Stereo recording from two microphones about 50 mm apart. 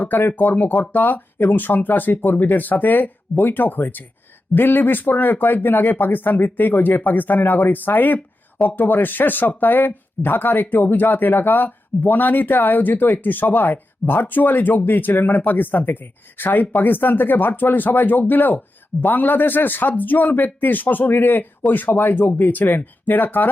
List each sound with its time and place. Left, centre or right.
0.0 s speech: left